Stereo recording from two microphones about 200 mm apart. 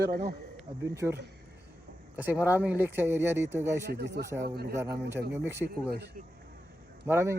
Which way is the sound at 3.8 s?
55° right (ahead or behind).